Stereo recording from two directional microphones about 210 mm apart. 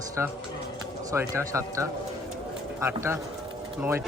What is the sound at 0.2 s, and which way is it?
A man's voice, 10° right (ahead or behind).